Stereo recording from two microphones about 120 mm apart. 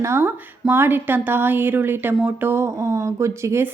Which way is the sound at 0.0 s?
20° right (ahead or behind).